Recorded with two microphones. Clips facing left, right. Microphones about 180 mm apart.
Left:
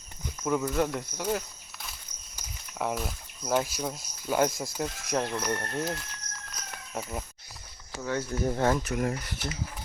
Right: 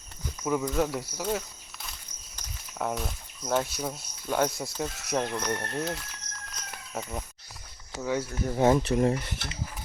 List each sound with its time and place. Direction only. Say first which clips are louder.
0.4 s speech: even; centre (ahead or behind)
6.6 s a sound: even; centre (ahead or behind)
8.0 s speech: even; 10° right (ahead or behind); by 9.6 s 25° right (ahead or behind)